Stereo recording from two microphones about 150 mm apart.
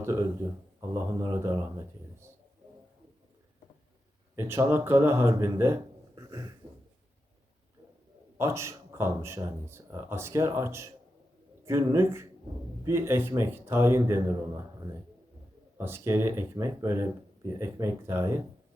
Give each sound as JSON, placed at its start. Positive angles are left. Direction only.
{"t": 0.0, "sound": "speech", "side_deg": -20}
{"t": 4.4, "sound": "speech", "side_deg": -15}
{"t": 6.1, "sound": "a sound", "side_deg": -20}
{"t": 8.4, "sound": "speech", "side_deg": -20}
{"t": 15.8, "sound": "speech", "side_deg": -15}